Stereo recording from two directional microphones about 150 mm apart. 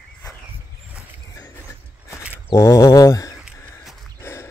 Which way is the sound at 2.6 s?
20° left (ahead or behind).